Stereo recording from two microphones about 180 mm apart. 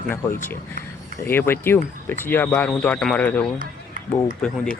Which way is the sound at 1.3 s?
10° left (ahead or behind).